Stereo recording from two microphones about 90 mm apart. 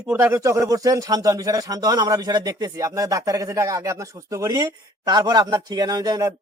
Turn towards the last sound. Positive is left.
turn(degrees=-45)  # may be behind; listen again after turning